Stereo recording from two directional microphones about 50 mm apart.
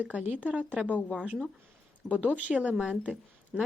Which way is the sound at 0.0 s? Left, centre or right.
Right.